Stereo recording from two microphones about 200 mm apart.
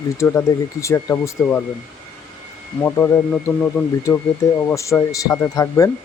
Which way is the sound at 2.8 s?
10° left (ahead or behind).